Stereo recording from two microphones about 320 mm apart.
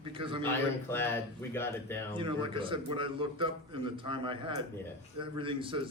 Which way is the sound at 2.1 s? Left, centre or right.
Centre.